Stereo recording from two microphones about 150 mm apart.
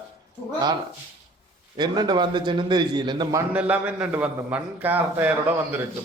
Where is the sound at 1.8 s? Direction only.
30° right (ahead or behind).